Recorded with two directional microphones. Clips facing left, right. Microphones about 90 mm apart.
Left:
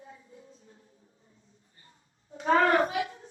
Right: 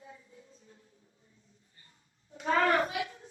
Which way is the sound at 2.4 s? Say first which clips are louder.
Left 4 dB; 30° left (ahead or behind).